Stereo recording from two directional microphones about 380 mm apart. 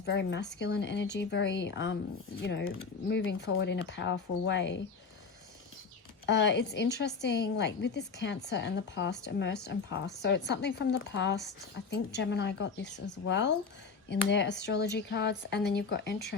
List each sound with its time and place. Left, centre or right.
0.0 s speech: left
6.2 s speech: left